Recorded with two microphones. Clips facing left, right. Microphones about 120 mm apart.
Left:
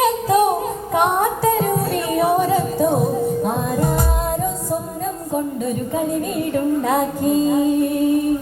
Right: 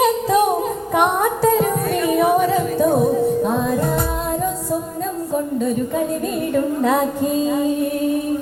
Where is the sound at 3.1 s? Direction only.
10° left (ahead or behind).